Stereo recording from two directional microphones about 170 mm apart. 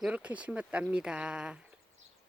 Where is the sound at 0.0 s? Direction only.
5° right (ahead or behind).